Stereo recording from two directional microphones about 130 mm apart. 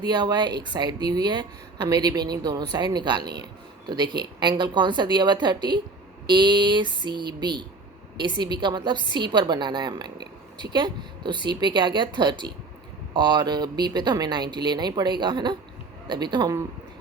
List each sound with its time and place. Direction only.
0.0 s a woman's voice: 30° right (ahead or behind)